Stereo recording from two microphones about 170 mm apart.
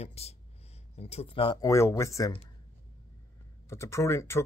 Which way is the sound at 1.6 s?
15° left (ahead or behind).